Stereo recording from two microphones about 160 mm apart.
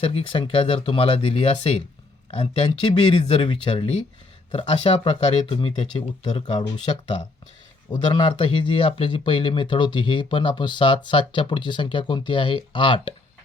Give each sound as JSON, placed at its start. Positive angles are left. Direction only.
{"t": 0.0, "sound": "speech", "side_deg": 35}
{"t": 8.1, "sound": "speech", "side_deg": 30}